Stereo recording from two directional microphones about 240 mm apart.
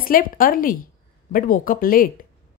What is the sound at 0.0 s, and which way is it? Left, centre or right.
Speech, left.